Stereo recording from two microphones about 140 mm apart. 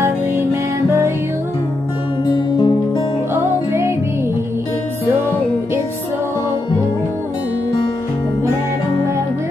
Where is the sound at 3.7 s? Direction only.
20° right (ahead or behind).